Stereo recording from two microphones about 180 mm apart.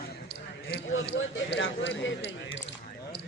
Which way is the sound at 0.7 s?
70° left (ahead or behind).